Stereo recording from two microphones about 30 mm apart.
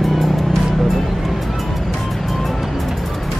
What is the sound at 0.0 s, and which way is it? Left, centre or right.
Music, centre.